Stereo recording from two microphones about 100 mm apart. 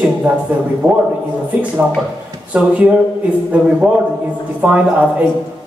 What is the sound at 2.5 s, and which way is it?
Speech, 15° right (ahead or behind).